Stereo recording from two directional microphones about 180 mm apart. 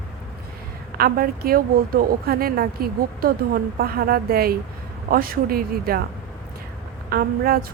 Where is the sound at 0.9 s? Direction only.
55° right (ahead or behind).